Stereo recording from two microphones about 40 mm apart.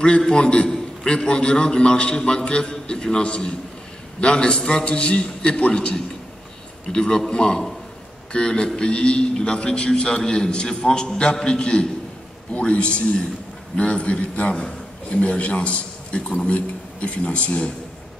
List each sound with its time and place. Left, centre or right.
0.2 s a man's voice: centre